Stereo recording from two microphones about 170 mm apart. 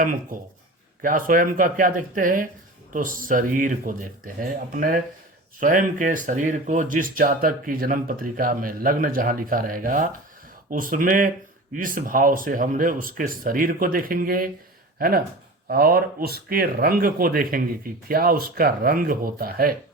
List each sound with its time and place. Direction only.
0.0 s speech: 50° right (ahead or behind)